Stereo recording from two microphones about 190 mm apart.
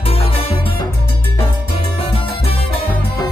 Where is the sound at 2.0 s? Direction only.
30° left (ahead or behind).